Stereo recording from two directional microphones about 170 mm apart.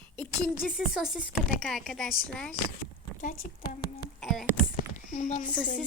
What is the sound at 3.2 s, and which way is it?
Speech, 55° left (ahead or behind).